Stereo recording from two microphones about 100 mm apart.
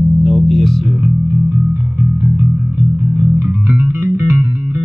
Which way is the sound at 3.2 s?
20° right (ahead or behind).